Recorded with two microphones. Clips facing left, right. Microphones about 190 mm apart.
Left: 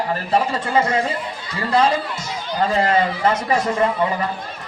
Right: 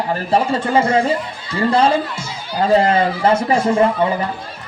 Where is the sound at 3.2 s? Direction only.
30° right (ahead or behind).